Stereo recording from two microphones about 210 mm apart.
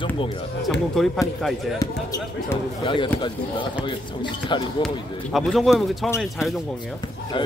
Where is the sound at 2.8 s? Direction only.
25° left (ahead or behind).